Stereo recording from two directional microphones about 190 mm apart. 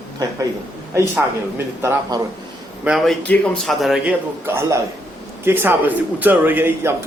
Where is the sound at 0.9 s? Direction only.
15° right (ahead or behind).